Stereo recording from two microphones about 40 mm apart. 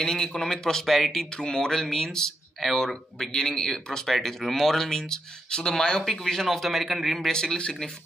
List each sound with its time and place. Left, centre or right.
0.0 s a man's voice: centre
1.1 s a man's voice: centre
7.2 s speech: centre
7.5 s speech: left